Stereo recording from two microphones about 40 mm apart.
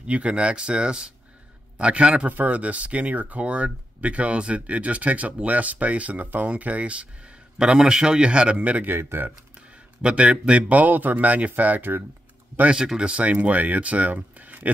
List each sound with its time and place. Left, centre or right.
0.0 s a man's voice: right
2.2 s speech: right
7.5 s a man's voice: centre
8.9 s speech: right
10.0 s a man's voice: right
10.8 s speech: right
12.7 s speech: right